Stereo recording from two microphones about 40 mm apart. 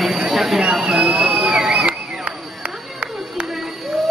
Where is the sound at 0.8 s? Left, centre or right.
Right.